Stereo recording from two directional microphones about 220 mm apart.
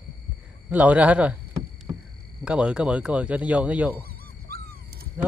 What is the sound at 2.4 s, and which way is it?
Speech, 5° right (ahead or behind).